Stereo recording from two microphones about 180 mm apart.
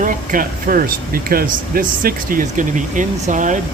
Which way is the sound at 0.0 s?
50° right (ahead or behind).